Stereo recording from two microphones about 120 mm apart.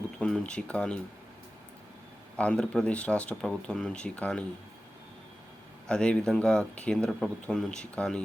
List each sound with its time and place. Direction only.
0.2 s speech: 10° left (ahead or behind)
2.4 s speech: 10° left (ahead or behind)
5.9 s speech: 10° left (ahead or behind)